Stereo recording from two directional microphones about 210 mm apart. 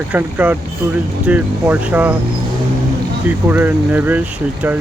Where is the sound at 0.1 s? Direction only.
10° right (ahead or behind).